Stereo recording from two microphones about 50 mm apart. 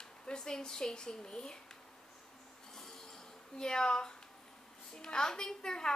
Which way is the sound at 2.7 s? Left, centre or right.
Centre.